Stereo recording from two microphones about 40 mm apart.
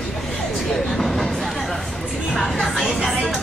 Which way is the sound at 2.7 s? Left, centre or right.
Centre.